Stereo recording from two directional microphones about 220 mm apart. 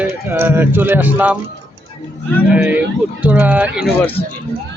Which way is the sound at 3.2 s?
5° right (ahead or behind).